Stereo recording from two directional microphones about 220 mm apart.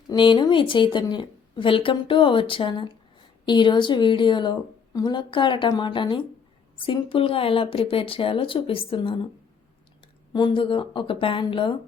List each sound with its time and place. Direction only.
0.1 s a woman's voice: 20° left (ahead or behind)
10.3 s a woman's voice: 20° left (ahead or behind)